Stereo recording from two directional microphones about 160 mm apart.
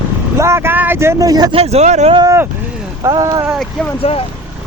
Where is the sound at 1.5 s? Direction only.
40° right (ahead or behind).